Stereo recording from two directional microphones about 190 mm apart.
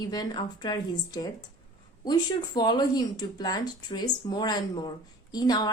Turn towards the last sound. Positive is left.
turn(degrees=20)  # may be behind; listen again after turning